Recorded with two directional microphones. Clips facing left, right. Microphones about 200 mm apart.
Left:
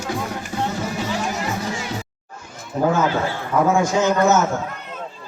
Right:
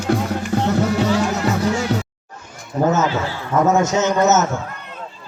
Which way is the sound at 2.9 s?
10° left (ahead or behind).